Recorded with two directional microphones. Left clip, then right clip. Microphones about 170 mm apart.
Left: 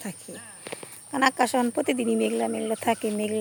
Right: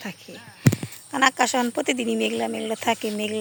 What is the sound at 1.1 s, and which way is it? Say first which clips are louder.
Speech: right 2 dB; 5° left (ahead or behind).